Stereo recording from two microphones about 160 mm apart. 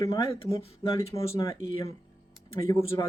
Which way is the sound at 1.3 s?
35° left (ahead or behind).